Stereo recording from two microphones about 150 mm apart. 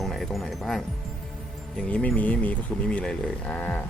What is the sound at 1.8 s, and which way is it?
Speech, 10° left (ahead or behind).